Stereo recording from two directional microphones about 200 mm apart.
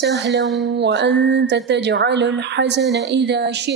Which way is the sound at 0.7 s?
60° right (ahead or behind).